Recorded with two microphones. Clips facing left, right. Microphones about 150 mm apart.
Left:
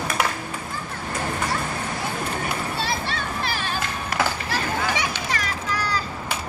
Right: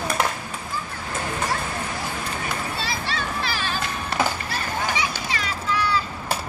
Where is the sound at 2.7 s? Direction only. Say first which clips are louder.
Left 1 dB; 55° left (ahead or behind).